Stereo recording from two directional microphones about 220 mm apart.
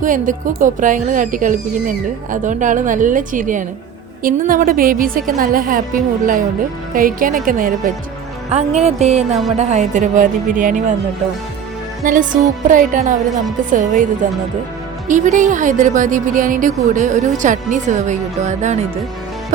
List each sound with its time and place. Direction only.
0.0 s a woman's voice: 35° right (ahead or behind)
8.4 s music: 30° right (ahead or behind)
9.6 s a woman's voice: 30° right (ahead or behind)
12.0 s a woman's voice: 35° right (ahead or behind)